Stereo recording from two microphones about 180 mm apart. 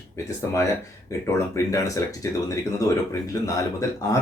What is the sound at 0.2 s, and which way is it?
Speech, 15° left (ahead or behind).